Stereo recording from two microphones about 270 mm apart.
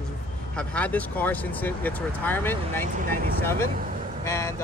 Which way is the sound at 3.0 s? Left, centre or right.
Right.